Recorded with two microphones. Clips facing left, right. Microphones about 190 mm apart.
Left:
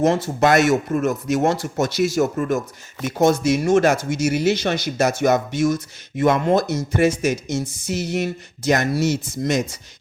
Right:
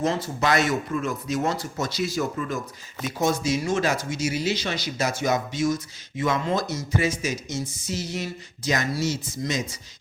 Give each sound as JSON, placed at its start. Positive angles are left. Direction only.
{"t": 0.0, "sound": "speech", "side_deg": 75}
{"t": 0.9, "sound": "speech", "side_deg": 45}
{"t": 1.8, "sound": "speech", "side_deg": 80}
{"t": 2.1, "sound": "speech", "side_deg": 50}